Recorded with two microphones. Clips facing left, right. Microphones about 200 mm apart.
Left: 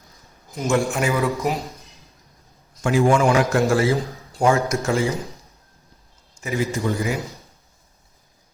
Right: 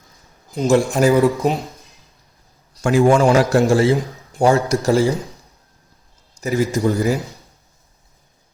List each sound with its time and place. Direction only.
0.5 s a man's voice: 35° right (ahead or behind)
2.7 s a man's voice: 40° right (ahead or behind); by 3.9 s 25° right (ahead or behind)
3.9 s a man's voice: 15° right (ahead or behind)
4.4 s a man's voice: 35° right (ahead or behind)
6.4 s a man's voice: 40° right (ahead or behind)